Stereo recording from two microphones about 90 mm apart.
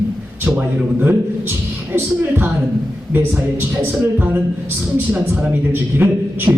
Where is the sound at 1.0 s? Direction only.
25° right (ahead or behind).